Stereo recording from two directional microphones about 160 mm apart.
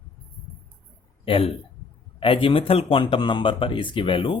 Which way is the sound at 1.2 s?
35° left (ahead or behind).